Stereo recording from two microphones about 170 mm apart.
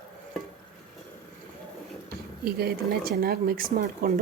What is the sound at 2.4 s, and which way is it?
Speech, 65° right (ahead or behind).